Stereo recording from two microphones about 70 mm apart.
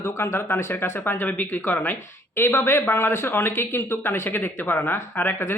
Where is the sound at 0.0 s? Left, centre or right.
Left.